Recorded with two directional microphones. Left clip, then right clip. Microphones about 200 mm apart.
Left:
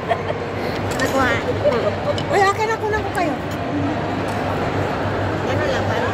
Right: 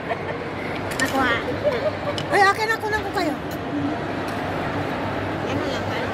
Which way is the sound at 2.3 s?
35° right (ahead or behind).